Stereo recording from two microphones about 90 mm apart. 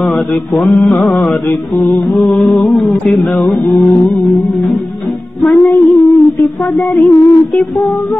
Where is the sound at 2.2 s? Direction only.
Centre (ahead or behind).